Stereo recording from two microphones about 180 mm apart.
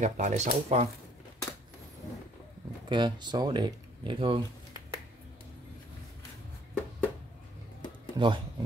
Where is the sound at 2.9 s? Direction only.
25° right (ahead or behind).